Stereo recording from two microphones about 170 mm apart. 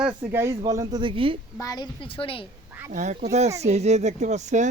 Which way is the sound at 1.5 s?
20° left (ahead or behind).